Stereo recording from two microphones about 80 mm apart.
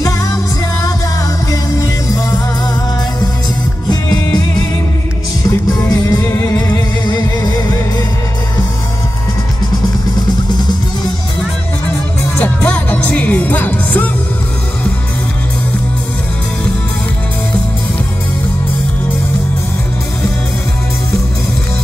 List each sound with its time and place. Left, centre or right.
1.5 s music: left
5.7 s music: left
12.4 s music: centre